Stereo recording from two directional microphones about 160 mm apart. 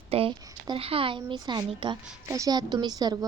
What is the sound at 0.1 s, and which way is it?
A woman's voice, 35° right (ahead or behind).